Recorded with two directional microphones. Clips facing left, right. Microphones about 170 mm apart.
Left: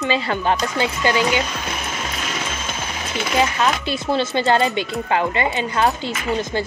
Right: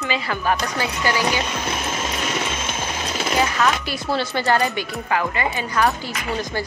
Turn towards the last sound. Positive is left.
turn(degrees=20)  # may be behind; listen again after turning